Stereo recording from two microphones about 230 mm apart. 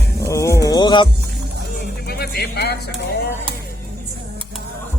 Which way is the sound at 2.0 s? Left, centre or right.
Left.